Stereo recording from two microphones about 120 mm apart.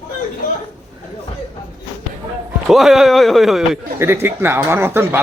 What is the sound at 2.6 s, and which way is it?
Speech, centre (ahead or behind).